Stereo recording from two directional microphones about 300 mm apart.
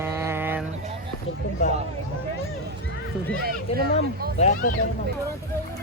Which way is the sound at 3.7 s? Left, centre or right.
Centre.